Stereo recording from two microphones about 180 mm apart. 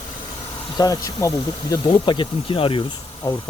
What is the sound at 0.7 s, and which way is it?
Speech, 20° left (ahead or behind).